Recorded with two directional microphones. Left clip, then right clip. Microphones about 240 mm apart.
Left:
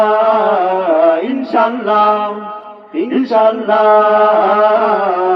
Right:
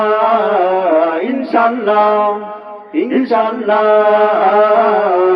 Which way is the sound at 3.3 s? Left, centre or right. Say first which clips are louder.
Left 5 dB; right.